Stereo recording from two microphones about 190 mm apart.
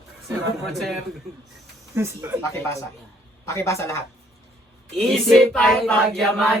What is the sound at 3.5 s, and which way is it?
Speech, 15° left (ahead or behind).